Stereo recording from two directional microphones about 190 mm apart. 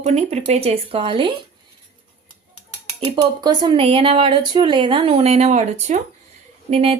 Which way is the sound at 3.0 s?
25° right (ahead or behind).